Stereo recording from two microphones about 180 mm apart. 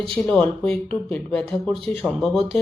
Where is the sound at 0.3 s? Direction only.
5° left (ahead or behind).